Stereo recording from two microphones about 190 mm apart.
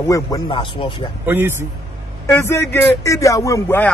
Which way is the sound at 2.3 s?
15° left (ahead or behind).